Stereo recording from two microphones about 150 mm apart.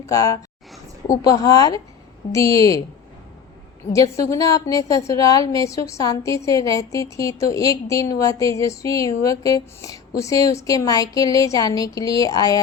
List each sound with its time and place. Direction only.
0.1 s a woman's voice: 20° left (ahead or behind)
3.9 s a woman's voice: 20° left (ahead or behind)